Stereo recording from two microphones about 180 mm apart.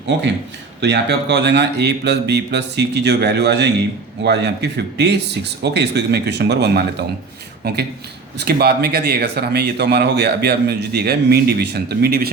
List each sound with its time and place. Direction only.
0.1 s speech: 75° right (ahead or behind)
8.4 s speech: 60° right (ahead or behind)